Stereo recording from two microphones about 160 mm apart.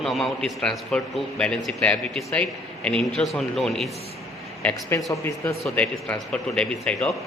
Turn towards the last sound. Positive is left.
turn(degrees=5)  # may be behind; listen again after turning